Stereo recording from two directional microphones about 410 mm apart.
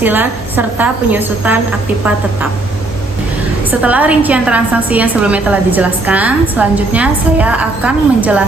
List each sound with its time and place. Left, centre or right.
0.0 s a woman's voice: centre
3.7 s a woman's voice: centre